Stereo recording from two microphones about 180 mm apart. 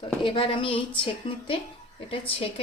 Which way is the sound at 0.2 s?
30° left (ahead or behind).